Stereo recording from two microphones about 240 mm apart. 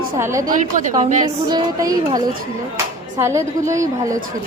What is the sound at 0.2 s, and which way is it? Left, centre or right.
Speech, centre.